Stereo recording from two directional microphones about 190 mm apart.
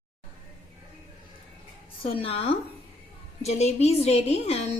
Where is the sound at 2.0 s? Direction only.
30° left (ahead or behind).